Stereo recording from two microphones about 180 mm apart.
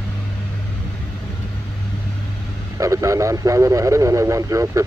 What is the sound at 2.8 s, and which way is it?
Speech, 15° right (ahead or behind).